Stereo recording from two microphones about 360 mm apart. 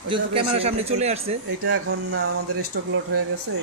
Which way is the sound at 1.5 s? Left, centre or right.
Right.